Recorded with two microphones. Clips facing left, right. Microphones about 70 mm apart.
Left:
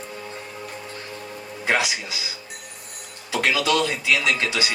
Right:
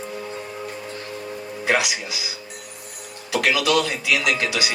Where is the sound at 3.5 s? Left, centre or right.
Left.